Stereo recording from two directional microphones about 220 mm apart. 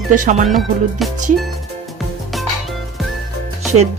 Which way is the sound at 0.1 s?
35° right (ahead or behind).